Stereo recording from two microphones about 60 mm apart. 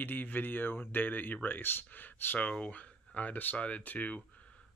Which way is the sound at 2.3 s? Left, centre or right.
Left.